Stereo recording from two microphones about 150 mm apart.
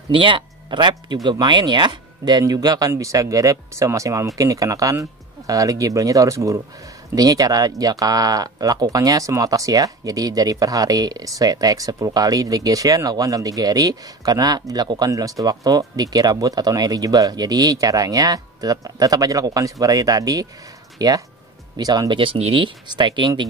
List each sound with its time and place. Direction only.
0.1 s speech: 35° right (ahead or behind)